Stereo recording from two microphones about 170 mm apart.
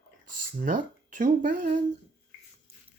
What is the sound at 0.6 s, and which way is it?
Speech, 50° right (ahead or behind).